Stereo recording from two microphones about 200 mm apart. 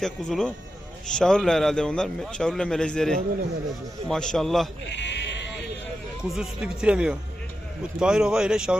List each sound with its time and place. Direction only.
0.0 s a man's voice: 5° left (ahead or behind)
4.9 s sheep: 60° left (ahead or behind)
6.2 s a man's voice: centre (ahead or behind)